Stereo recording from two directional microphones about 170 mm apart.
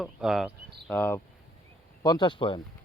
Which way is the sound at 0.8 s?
10° left (ahead or behind).